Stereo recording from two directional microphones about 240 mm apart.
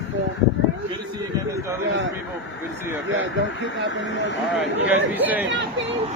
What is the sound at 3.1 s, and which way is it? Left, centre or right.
Speech, right.